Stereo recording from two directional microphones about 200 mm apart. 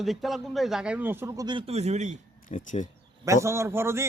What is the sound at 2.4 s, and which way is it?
Speech, 40° left (ahead or behind).